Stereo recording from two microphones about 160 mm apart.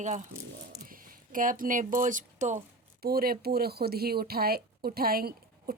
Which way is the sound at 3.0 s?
70° right (ahead or behind).